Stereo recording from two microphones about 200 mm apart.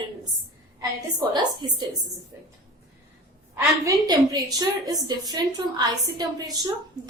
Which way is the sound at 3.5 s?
20° right (ahead or behind).